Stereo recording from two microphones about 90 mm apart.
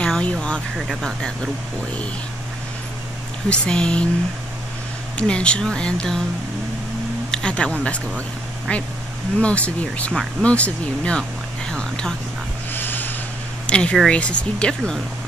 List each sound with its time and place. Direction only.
0.0 s vehicle: 10° left (ahead or behind)
0.7 s speech: 5° right (ahead or behind)
3.4 s speech: 10° left (ahead or behind)
5.1 s speech: 10° left (ahead or behind)
7.2 s speech: 10° left (ahead or behind)
9.4 s speech: 15° left (ahead or behind)
12.7 s a sound: 20° left (ahead or behind)
13.7 s speech: 10° left (ahead or behind)